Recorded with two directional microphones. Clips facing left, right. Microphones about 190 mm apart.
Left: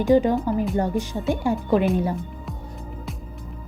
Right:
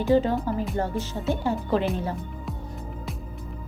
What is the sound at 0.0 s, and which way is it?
Speech, 15° left (ahead or behind).